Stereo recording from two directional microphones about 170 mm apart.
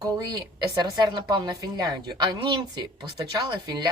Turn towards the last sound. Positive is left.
turn(degrees=-25)  # may be behind; listen again after turning